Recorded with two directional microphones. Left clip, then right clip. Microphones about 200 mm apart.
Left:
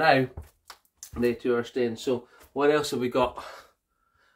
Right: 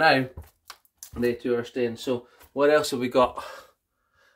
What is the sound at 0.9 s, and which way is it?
Speech, 25° right (ahead or behind).